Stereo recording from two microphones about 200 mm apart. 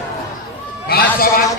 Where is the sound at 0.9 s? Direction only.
50° left (ahead or behind).